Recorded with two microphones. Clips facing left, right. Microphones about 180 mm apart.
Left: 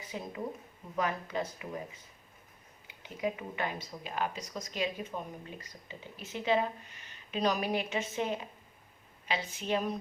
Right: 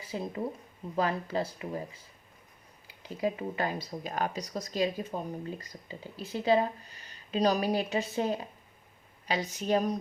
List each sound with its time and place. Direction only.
0.0 s speech: 35° right (ahead or behind)